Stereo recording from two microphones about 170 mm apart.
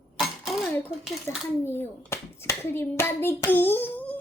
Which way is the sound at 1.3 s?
15° left (ahead or behind).